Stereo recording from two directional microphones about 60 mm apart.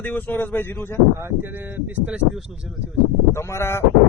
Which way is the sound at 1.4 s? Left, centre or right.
Right.